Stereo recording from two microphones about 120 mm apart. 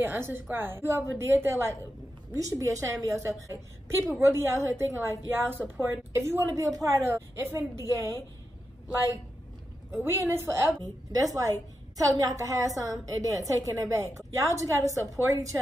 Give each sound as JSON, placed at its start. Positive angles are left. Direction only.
{"t": 0.0, "sound": "a woman's voice", "side_deg": -15}
{"t": 10.0, "sound": "a woman's voice", "side_deg": -25}